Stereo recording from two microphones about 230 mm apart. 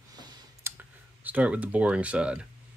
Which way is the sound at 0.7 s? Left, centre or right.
Centre.